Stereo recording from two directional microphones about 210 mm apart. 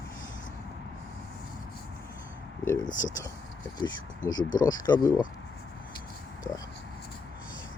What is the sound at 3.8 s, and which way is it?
Speech, 20° left (ahead or behind).